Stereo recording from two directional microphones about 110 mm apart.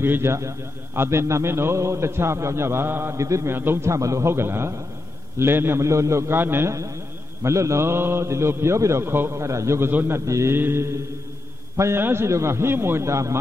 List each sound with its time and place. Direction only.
0.0 s a man's voice: 20° right (ahead or behind)